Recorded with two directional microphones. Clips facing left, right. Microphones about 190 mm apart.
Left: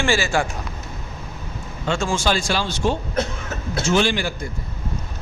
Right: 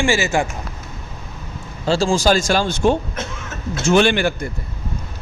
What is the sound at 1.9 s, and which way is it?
A man's voice, 35° right (ahead or behind).